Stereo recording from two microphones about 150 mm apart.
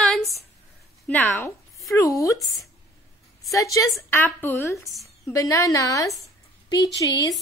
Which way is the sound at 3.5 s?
20° left (ahead or behind).